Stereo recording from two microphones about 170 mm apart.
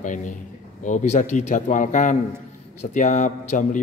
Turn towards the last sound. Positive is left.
turn(degrees=45)  # may be behind; listen again after turning